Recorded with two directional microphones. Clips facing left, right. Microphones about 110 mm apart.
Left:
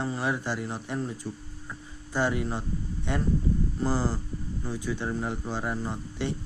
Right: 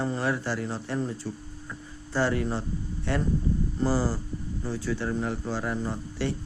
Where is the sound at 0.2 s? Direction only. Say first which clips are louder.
Right 1 dB; 15° left (ahead or behind).